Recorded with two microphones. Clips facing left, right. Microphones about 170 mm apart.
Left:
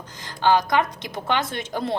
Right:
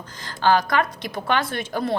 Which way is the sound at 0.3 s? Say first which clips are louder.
Even; 20° left (ahead or behind).